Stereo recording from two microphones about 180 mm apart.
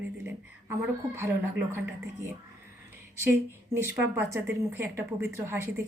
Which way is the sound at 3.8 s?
15° right (ahead or behind).